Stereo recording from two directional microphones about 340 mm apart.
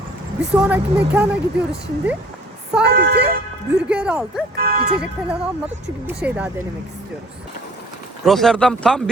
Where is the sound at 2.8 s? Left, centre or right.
Right.